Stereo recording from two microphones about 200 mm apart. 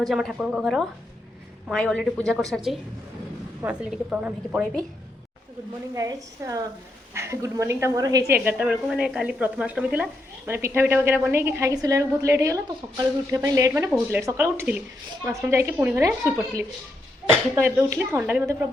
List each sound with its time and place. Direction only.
0.0 s a woman's voice: centre (ahead or behind)
3.6 s a woman's voice: 5° right (ahead or behind)
5.9 s a woman's voice: 15° right (ahead or behind)